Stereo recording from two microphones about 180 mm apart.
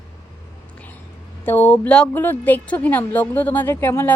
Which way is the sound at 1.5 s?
10° left (ahead or behind).